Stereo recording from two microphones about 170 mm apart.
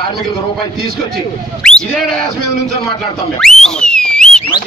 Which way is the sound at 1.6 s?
5° left (ahead or behind).